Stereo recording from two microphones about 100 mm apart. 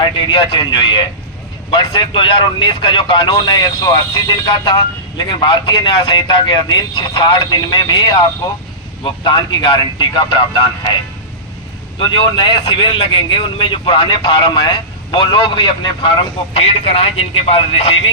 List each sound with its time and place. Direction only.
0.0 s speech: 55° left (ahead or behind)
11.9 s speech: 55° left (ahead or behind)
16.6 s speech: 75° left (ahead or behind)